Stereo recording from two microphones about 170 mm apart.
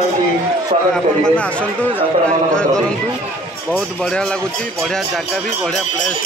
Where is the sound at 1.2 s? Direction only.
5° left (ahead or behind).